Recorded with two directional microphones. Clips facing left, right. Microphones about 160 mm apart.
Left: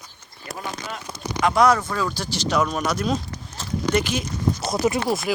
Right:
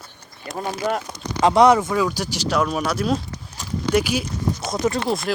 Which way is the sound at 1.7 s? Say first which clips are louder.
Right 5 dB; 15° right (ahead or behind).